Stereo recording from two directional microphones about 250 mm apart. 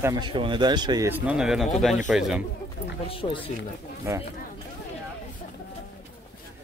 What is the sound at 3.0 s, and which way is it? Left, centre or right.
Speech, left.